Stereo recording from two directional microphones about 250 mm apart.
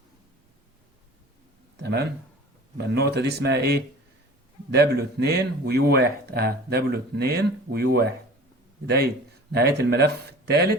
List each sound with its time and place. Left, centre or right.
1.7 s speech: right
9.5 s speech: right